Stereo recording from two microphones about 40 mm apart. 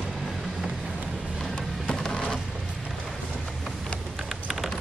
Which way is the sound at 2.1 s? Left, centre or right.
Centre.